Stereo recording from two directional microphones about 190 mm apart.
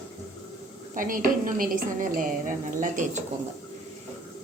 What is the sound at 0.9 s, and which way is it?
A woman's voice, 45° right (ahead or behind).